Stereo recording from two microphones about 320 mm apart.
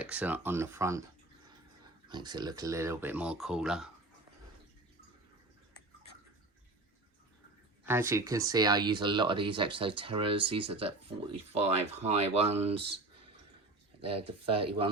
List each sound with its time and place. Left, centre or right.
0.0 s speech: centre
2.0 s speech: centre
7.9 s speech: centre
14.3 s speech: centre